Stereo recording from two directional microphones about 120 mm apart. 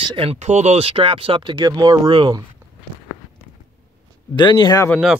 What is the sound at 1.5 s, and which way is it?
Speech, 35° right (ahead or behind).